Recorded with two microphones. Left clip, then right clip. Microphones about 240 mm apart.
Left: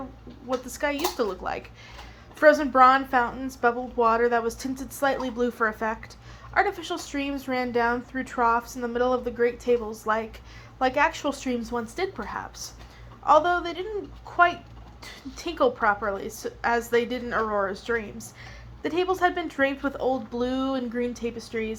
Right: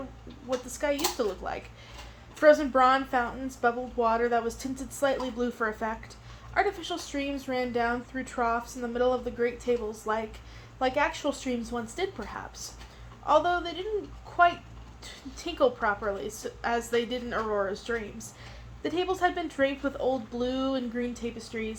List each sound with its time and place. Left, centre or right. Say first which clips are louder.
0.7 s speech: left 1 dB; left